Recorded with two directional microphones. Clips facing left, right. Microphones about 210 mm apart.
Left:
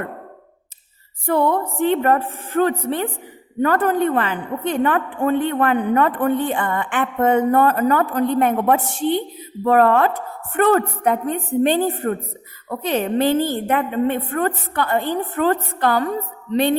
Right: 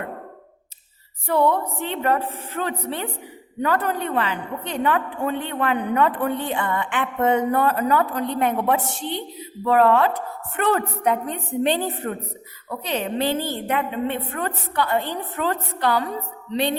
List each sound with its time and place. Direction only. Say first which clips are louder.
1.3 s a woman's voice: left 2 dB; 50° left (ahead or behind)